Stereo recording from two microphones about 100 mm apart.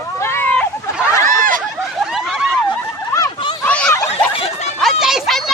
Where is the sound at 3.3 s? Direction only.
55° left (ahead or behind).